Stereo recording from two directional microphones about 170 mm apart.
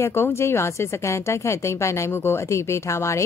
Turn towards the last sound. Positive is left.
turn(degrees=15)  # may be behind; listen again after turning